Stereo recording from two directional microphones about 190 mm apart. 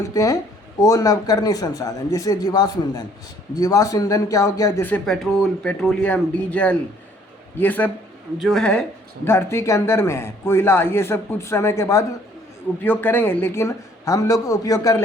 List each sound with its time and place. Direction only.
0.1 s speech: 20° left (ahead or behind)